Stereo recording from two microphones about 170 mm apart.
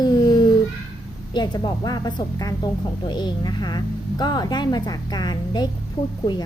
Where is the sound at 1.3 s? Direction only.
25° left (ahead or behind).